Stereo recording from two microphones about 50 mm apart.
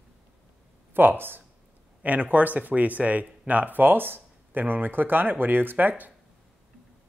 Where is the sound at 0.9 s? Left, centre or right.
Right.